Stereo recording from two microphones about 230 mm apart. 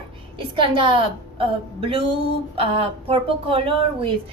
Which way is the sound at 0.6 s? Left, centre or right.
Right.